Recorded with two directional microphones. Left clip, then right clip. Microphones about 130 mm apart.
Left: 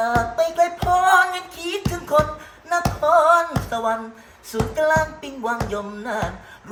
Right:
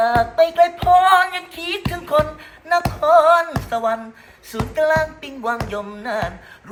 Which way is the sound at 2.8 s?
25° left (ahead or behind).